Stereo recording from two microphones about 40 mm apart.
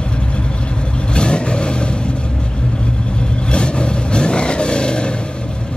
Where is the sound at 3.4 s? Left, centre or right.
Left.